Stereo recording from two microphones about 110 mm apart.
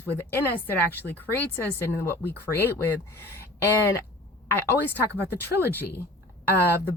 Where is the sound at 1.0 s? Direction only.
15° left (ahead or behind).